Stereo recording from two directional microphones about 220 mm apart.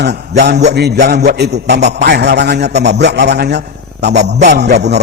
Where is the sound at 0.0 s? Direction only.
50° right (ahead or behind).